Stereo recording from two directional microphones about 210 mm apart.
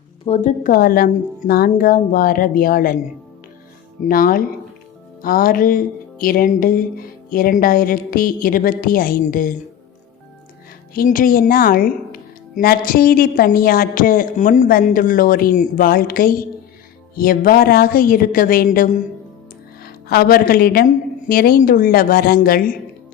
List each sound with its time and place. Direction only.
0.3 s a woman's voice: 35° left (ahead or behind)
4.0 s a woman's voice: 40° left (ahead or behind)
10.9 s a woman's voice: 40° left (ahead or behind)